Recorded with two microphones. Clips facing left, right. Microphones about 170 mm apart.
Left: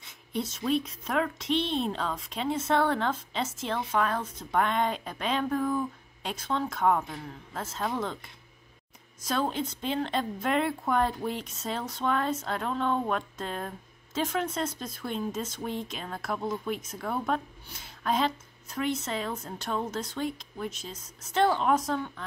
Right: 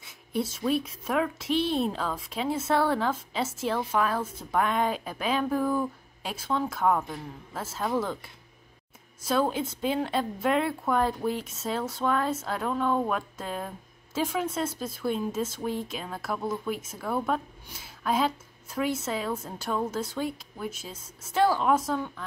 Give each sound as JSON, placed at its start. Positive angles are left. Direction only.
{"t": 0.0, "sound": "speech", "side_deg": -5}